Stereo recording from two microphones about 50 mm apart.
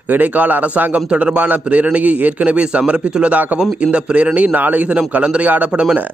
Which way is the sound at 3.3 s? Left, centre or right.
Right.